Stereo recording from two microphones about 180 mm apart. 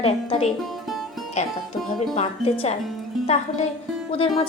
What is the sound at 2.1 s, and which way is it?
Speech, 35° left (ahead or behind).